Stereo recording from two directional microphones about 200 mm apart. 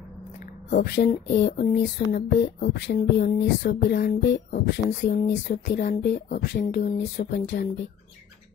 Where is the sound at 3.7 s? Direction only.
55° left (ahead or behind).